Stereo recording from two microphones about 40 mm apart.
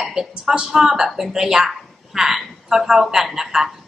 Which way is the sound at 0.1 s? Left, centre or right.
Centre.